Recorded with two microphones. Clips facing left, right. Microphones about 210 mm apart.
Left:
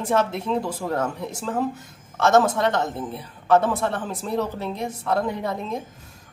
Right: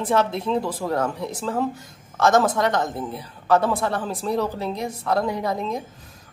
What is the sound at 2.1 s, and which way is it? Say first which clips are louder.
Speech: even; 40° right (ahead or behind).